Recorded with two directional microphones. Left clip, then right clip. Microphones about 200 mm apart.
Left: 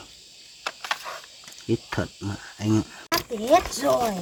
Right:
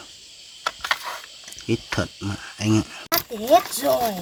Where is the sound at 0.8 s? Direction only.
20° right (ahead or behind).